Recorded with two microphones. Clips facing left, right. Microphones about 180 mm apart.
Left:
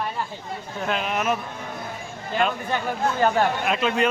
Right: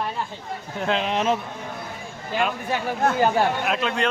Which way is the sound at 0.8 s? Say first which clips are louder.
Right 2 dB; 25° right (ahead or behind).